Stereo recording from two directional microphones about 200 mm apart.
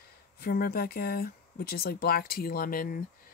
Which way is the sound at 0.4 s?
50° left (ahead or behind).